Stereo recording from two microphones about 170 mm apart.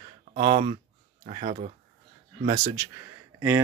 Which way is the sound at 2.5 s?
20° right (ahead or behind).